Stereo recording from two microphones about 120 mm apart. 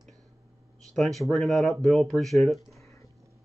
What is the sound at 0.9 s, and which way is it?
Speech, centre (ahead or behind).